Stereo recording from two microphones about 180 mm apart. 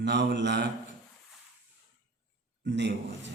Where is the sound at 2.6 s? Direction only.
75° right (ahead or behind).